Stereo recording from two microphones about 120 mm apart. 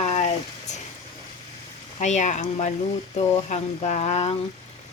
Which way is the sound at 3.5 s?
70° left (ahead or behind).